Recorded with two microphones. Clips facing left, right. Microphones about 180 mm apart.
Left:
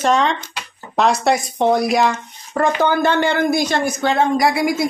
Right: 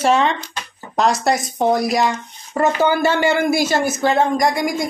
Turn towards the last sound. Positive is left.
turn(degrees=5)  # may be behind; listen again after turning